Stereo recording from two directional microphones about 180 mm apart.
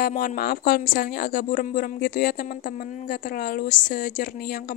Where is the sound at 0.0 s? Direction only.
50° left (ahead or behind).